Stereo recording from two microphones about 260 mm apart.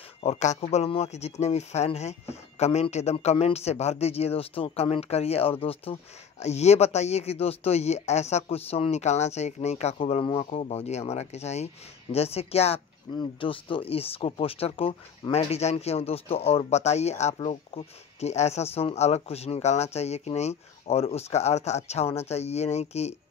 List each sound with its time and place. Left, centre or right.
0.2 s speech: left